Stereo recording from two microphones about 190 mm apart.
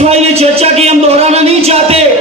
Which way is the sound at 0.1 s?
35° right (ahead or behind).